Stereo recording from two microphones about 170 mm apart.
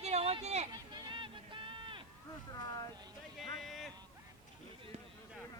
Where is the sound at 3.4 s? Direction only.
Centre (ahead or behind).